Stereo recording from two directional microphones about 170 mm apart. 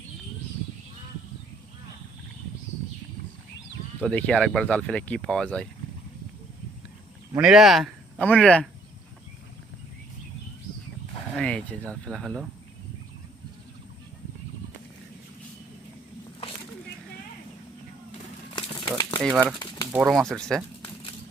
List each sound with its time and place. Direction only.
4.0 s speech: 5° left (ahead or behind)
7.3 s speech: 5° right (ahead or behind)
11.3 s speech: 5° left (ahead or behind)
18.5 s crumpling: 30° left (ahead or behind)
19.9 s speech: 5° right (ahead or behind)